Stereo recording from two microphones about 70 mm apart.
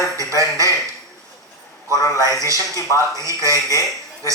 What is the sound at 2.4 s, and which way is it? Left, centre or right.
A man's voice, right.